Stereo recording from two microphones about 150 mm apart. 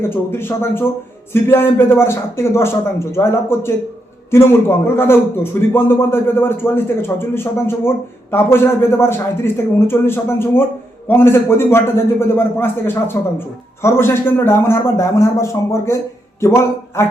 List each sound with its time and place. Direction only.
0.0 s speech: 15° left (ahead or behind)
4.9 s speech: 15° left (ahead or behind)